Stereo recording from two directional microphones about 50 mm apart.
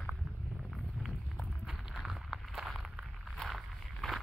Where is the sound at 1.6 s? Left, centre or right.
Centre.